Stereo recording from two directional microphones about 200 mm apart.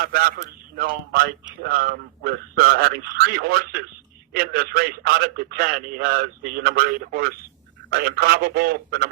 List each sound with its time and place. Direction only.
0.0 s a man's voice: 50° right (ahead or behind)